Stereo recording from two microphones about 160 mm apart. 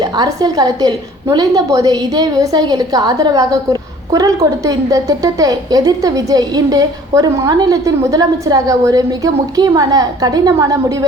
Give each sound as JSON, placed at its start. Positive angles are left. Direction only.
{"t": 0.0, "sound": "a woman's voice", "side_deg": -25}